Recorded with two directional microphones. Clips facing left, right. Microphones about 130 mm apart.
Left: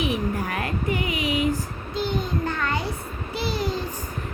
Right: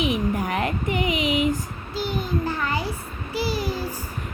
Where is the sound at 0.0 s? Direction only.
15° right (ahead or behind).